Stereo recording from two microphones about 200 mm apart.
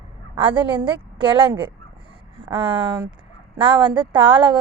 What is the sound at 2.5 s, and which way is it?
A woman's voice, 25° right (ahead or behind).